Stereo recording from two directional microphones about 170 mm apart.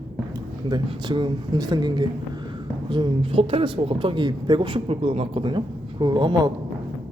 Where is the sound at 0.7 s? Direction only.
25° right (ahead or behind).